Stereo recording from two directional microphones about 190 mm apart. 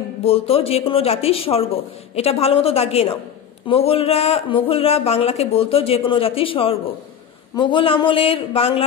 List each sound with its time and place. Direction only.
0.2 s speech: 30° left (ahead or behind)